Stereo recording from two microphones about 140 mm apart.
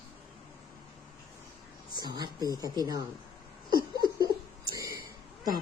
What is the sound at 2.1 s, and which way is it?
Speech, 30° right (ahead or behind).